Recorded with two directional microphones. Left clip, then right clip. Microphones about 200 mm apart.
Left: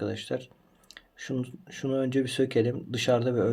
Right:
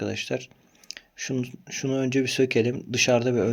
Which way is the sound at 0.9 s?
90° right.